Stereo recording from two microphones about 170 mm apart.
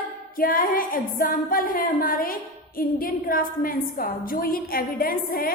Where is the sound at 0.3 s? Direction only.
55° left (ahead or behind).